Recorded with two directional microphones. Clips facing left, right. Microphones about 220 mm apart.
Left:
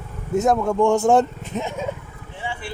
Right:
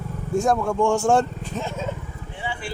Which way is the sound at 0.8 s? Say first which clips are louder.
Left 4 dB; 20° left (ahead or behind).